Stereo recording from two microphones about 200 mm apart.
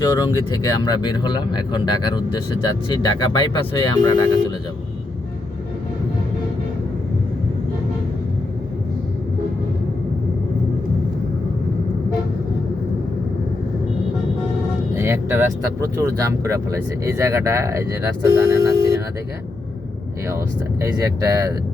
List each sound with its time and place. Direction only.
0.0 s speech: 20° left (ahead or behind)
14.9 s vehicle: 10° right (ahead or behind)
16.0 s speech: 15° right (ahead or behind)
20.8 s speech: 15° right (ahead or behind)